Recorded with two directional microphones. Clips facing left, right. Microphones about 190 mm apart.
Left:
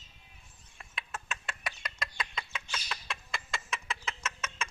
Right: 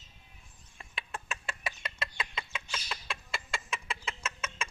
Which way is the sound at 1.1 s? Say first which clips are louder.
Right 1 dB; 30° right (ahead or behind).